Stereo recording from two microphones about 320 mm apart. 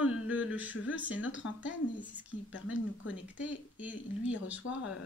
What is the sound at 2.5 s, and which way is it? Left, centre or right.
Speech, left.